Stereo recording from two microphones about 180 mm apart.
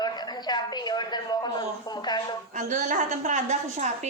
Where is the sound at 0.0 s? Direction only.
25° left (ahead or behind).